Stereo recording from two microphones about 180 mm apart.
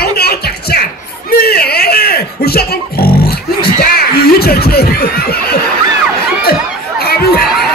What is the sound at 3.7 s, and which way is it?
Snicker, 60° left (ahead or behind).